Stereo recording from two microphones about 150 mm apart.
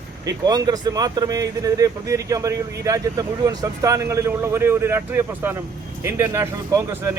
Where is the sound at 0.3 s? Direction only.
25° right (ahead or behind).